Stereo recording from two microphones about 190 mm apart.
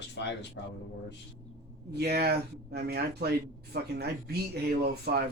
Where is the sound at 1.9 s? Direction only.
55° right (ahead or behind).